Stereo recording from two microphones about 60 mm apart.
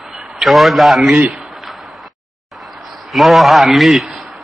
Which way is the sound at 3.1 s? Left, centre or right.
Centre.